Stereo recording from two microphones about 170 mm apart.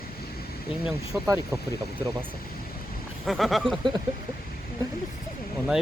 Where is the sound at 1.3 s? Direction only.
15° right (ahead or behind).